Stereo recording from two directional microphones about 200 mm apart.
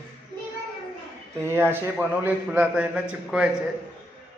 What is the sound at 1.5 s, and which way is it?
A man's voice, 10° right (ahead or behind).